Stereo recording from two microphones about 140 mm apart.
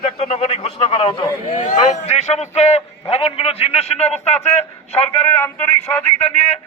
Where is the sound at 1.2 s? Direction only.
25° left (ahead or behind).